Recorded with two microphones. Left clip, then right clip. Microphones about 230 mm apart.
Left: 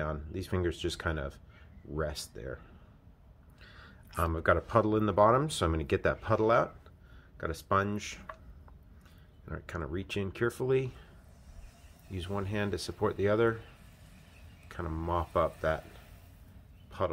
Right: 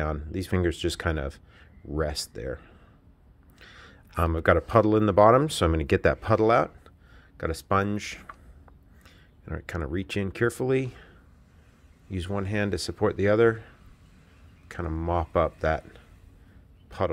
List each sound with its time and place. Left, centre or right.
0.0 s speech: right
9.5 s speech: right
12.1 s speech: right
14.7 s speech: right
16.9 s speech: right